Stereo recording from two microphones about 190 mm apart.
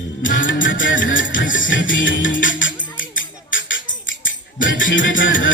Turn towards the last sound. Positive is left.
turn(degrees=85)